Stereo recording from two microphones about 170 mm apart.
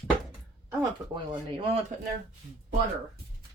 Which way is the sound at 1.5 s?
30° right (ahead or behind).